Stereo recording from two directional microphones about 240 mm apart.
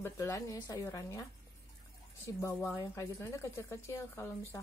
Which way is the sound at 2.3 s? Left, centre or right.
Centre.